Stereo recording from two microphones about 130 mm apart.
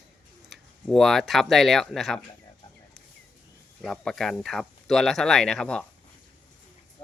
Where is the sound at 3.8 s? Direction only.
5° left (ahead or behind).